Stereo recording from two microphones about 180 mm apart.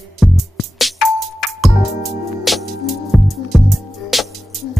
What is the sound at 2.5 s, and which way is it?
Music, centre (ahead or behind).